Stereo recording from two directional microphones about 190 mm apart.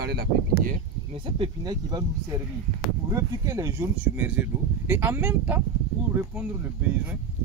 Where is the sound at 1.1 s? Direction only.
25° right (ahead or behind); by 5.6 s 10° right (ahead or behind).